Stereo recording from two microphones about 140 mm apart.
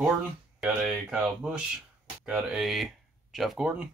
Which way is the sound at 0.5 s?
5° right (ahead or behind).